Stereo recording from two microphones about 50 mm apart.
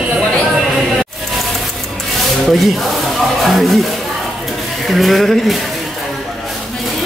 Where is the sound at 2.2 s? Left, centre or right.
Centre.